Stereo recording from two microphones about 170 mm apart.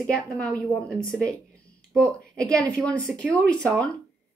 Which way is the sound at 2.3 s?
5° left (ahead or behind).